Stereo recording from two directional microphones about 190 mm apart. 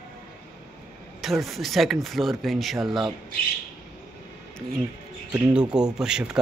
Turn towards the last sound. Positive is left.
turn(degrees=-5)  # may be behind; listen again after turning